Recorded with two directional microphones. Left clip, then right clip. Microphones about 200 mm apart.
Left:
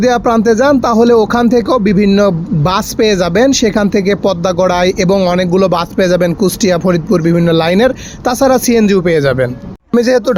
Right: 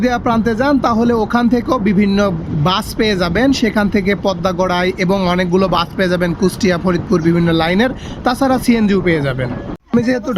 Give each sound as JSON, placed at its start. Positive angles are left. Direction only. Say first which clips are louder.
{"t": 0.0, "sound": "speech", "louder": "left 5 dB", "side_deg": 15}